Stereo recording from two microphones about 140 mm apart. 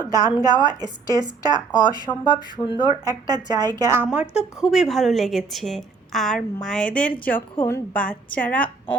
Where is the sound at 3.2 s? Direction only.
30° right (ahead or behind).